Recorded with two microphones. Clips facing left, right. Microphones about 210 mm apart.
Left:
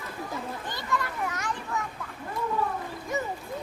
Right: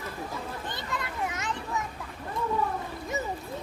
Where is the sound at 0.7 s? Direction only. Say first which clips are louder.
Left 3 dB; 20° right (ahead or behind).